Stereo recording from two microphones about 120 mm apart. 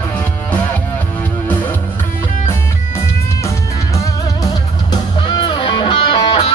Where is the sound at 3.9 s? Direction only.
30° left (ahead or behind).